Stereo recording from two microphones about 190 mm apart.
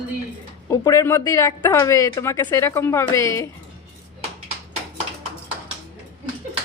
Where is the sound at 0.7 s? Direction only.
15° left (ahead or behind).